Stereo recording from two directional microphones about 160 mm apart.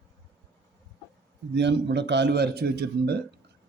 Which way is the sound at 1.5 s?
90° right.